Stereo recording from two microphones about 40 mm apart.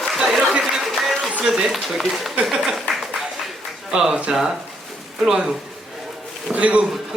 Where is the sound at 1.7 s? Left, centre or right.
Centre.